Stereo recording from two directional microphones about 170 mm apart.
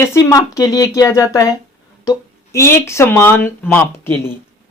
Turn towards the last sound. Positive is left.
turn(degrees=10)  # may be behind; listen again after turning